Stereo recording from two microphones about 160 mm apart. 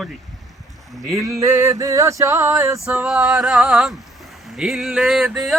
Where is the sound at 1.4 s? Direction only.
15° right (ahead or behind).